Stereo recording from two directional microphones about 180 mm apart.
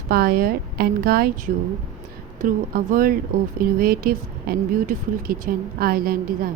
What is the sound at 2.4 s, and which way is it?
A woman's voice, 55° right (ahead or behind).